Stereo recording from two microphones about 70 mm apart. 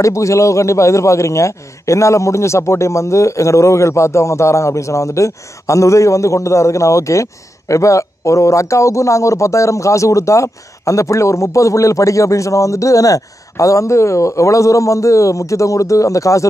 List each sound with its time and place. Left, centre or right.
0.0 s a man's voice: left